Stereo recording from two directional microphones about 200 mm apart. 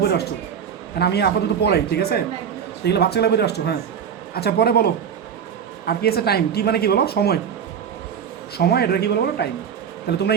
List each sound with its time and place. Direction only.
0.0 s a man's voice: 55° left (ahead or behind)
8.5 s a man's voice: 50° left (ahead or behind)